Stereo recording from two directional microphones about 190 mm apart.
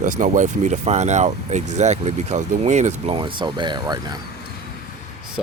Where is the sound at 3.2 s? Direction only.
25° right (ahead or behind).